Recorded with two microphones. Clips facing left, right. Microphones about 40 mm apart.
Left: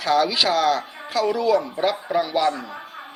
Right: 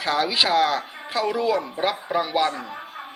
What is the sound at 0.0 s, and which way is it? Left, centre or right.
Speech, centre.